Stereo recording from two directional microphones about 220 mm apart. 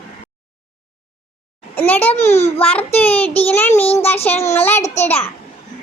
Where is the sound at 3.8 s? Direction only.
25° left (ahead or behind).